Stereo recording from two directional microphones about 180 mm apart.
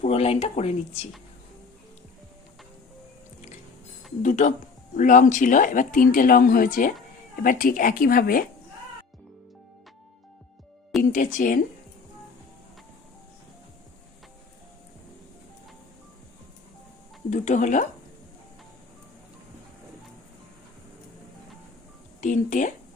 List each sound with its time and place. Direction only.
0.0 s speech: 35° left (ahead or behind)
4.2 s speech: 45° left (ahead or behind)
11.1 s speech: 45° left (ahead or behind)
17.2 s speech: 40° left (ahead or behind)
22.2 s speech: 45° left (ahead or behind)